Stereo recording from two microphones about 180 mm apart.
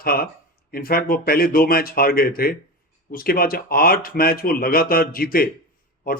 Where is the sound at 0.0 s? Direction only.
55° left (ahead or behind).